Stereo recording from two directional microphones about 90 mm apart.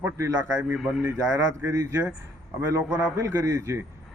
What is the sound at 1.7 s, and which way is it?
A man's voice, 40° right (ahead or behind).